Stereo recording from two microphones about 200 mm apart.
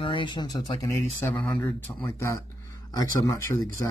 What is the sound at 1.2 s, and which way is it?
Speech, 5° left (ahead or behind).